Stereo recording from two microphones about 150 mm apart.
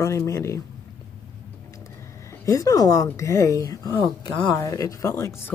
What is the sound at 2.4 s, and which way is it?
Speech, 20° left (ahead or behind).